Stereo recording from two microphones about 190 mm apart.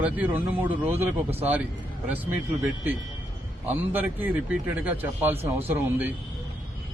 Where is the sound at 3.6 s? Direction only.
10° right (ahead or behind).